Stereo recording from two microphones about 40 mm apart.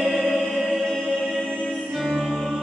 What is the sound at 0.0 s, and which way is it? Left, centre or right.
Music, centre.